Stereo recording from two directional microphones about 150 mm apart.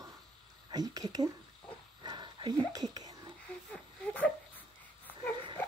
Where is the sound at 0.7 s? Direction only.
25° right (ahead or behind).